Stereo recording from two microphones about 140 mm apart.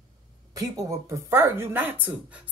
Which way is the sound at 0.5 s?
25° right (ahead or behind).